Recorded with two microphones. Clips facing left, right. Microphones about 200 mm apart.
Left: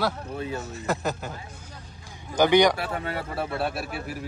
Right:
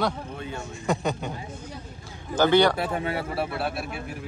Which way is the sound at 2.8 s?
20° right (ahead or behind).